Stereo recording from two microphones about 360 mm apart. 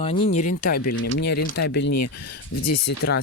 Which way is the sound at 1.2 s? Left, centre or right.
Left.